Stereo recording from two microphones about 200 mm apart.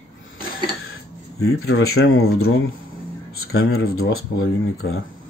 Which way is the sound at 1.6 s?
90° left.